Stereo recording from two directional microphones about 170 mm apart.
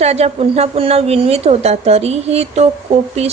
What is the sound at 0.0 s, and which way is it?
A woman's voice, 40° right (ahead or behind).